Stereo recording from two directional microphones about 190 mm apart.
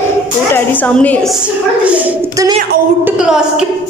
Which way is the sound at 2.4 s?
20° right (ahead or behind).